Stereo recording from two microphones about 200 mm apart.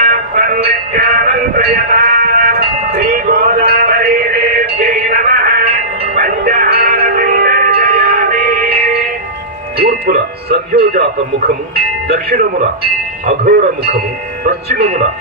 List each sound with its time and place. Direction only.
0.0 s synthetic singing: 45° right (ahead or behind)
6.1 s music: 45° right (ahead or behind)
9.8 s speech: 50° right (ahead or behind)